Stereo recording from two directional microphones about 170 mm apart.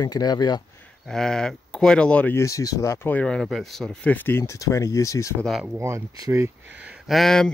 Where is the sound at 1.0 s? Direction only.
5° left (ahead or behind); by 5.3 s 20° left (ahead or behind).